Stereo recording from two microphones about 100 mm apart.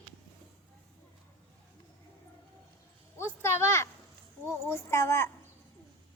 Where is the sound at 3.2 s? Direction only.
25° left (ahead or behind).